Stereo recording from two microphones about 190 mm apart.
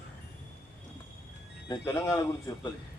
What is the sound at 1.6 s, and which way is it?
A man's voice, 15° left (ahead or behind).